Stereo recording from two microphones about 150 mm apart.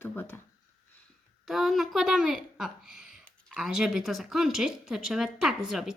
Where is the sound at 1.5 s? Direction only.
Centre (ahead or behind).